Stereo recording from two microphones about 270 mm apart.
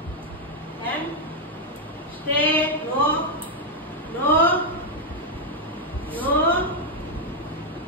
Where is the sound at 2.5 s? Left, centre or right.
Centre.